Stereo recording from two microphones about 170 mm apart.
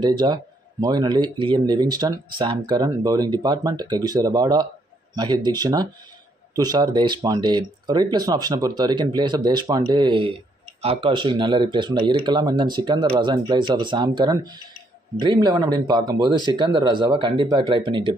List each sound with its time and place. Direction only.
0.0 s speech: 25° right (ahead or behind)